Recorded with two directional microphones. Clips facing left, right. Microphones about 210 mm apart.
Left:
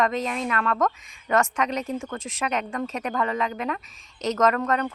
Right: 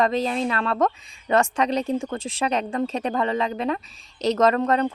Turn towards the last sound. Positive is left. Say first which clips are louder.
# right 3 dB
turn(degrees=-30)  # may be behind; listen again after turning